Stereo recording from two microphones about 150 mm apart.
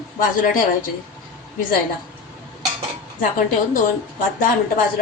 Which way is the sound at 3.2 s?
65° left (ahead or behind).